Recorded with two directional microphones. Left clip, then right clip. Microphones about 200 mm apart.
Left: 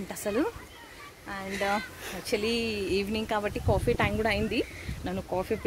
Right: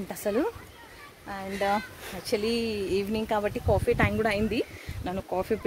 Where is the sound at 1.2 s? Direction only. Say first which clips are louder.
Right 2 dB; 30° right (ahead or behind).